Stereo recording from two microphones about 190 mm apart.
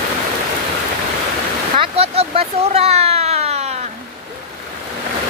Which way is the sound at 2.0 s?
30° right (ahead or behind).